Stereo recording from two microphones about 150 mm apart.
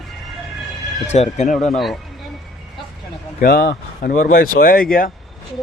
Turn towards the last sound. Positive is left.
turn(degrees=75)  # may be behind; listen again after turning